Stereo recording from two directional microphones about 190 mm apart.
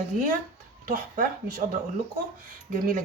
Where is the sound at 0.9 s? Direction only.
45° right (ahead or behind).